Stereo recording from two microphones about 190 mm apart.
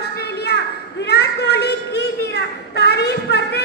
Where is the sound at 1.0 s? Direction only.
60° left (ahead or behind).